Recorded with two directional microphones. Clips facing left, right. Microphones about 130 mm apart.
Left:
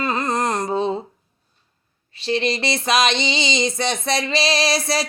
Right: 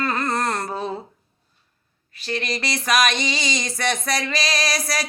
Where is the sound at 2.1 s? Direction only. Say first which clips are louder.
Left 6 dB; 25° left (ahead or behind).